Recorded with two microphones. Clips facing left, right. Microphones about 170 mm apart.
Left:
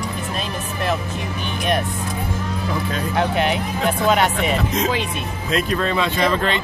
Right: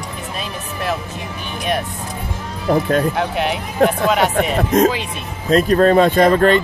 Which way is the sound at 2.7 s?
50° right (ahead or behind).